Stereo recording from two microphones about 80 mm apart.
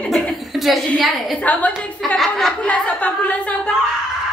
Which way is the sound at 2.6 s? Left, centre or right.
Centre.